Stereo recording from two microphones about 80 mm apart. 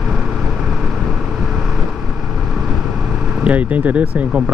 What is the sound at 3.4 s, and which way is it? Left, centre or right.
Speech, centre.